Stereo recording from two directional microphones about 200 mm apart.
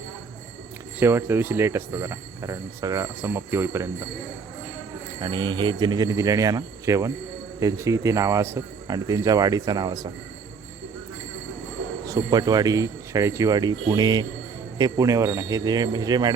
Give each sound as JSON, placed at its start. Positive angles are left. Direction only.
{"t": 0.9, "sound": "speech", "side_deg": -10}
{"t": 5.2, "sound": "speech", "side_deg": -20}
{"t": 12.0, "sound": "speech", "side_deg": -20}